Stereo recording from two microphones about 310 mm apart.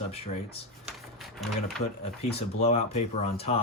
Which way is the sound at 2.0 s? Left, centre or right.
Centre.